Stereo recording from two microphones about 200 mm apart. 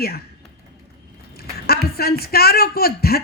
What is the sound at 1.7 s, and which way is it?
A woman's voice, 50° left (ahead or behind).